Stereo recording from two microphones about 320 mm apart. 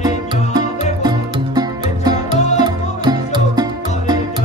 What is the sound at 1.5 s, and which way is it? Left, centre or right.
Music, centre.